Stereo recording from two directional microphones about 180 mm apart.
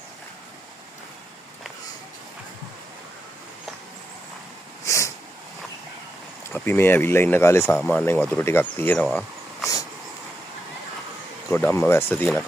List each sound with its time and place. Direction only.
4.8 s a sound: 15° left (ahead or behind)
6.5 s speech: 10° left (ahead or behind)
11.5 s speech: 10° left (ahead or behind)